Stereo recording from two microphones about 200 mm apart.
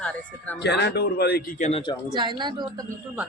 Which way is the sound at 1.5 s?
35° left (ahead or behind).